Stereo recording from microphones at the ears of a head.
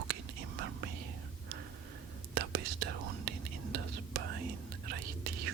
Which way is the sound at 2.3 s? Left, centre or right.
Right.